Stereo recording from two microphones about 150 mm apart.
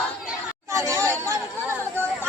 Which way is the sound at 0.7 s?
20° right (ahead or behind).